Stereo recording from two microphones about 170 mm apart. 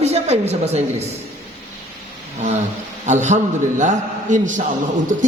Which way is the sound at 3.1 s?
45° right (ahead or behind).